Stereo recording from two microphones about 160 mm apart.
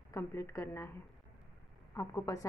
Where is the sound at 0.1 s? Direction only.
20° left (ahead or behind).